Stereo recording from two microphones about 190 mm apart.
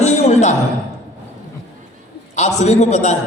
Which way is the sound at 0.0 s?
35° left (ahead or behind).